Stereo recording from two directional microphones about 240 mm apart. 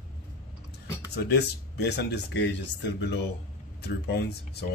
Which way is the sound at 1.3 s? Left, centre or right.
Left.